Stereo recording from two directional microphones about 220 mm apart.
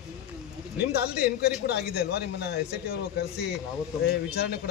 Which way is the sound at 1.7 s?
45° left (ahead or behind).